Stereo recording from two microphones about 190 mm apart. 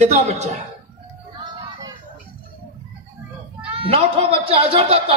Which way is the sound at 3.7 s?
30° right (ahead or behind).